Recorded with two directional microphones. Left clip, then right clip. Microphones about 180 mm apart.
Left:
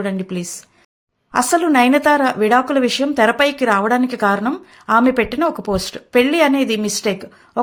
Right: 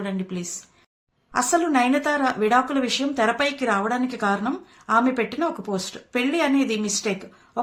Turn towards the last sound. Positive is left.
turn(degrees=50)  # may be behind; listen again after turning